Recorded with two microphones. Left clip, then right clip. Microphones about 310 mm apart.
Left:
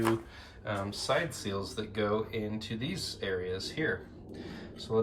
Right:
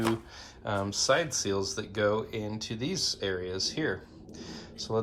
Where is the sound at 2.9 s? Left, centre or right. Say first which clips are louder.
Right 7 dB; right.